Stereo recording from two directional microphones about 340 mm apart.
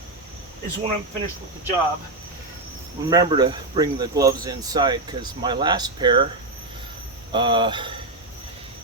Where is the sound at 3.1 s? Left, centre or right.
Centre.